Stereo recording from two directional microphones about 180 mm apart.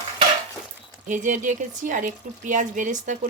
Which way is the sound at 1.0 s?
45° right (ahead or behind).